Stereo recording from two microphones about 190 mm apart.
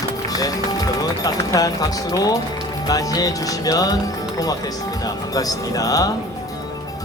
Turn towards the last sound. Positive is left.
turn(degrees=20)  # may be behind; listen again after turning